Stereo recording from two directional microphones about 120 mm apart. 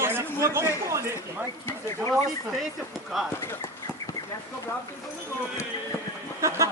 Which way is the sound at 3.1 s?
Centre (ahead or behind).